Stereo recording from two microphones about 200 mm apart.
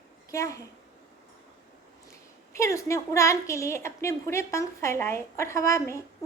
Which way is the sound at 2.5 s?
15° left (ahead or behind).